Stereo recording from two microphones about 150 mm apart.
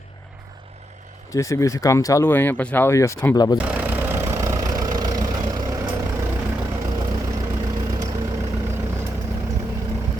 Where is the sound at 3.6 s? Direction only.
10° right (ahead or behind).